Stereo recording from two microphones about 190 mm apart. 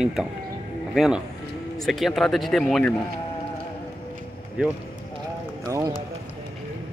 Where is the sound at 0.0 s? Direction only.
5° right (ahead or behind).